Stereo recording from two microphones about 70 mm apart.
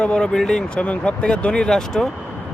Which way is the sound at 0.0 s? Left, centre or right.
Centre.